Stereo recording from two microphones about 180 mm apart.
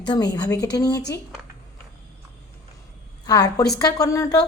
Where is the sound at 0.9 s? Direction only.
70° left (ahead or behind).